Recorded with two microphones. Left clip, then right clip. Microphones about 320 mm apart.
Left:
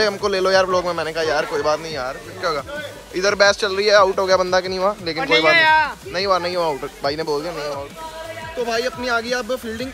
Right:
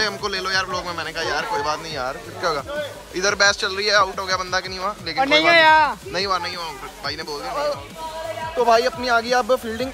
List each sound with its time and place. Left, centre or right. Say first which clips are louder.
0.0 s a man's voice: left 5 dB; centre
5.2 s speech: right 1 dB; right
6.1 s a man's voice: left 4 dB; centre